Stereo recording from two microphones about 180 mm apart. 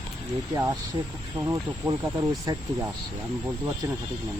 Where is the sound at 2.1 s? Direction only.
20° right (ahead or behind).